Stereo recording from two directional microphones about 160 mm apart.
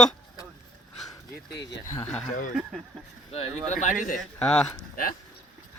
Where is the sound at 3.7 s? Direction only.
50° left (ahead or behind).